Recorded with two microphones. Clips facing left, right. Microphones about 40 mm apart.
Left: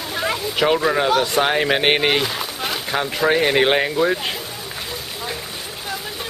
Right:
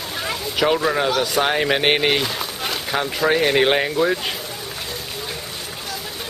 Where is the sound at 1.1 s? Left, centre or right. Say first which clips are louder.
Left 2 dB; centre.